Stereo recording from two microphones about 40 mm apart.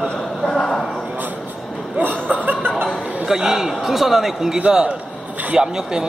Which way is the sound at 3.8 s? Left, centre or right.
Centre.